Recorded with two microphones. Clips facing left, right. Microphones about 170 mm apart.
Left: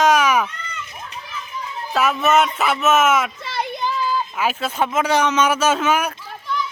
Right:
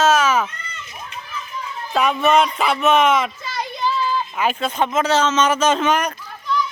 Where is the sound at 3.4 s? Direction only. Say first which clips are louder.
Left 2 dB; 60° left (ahead or behind).